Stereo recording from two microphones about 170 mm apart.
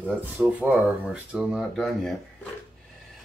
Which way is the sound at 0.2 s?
10° right (ahead or behind).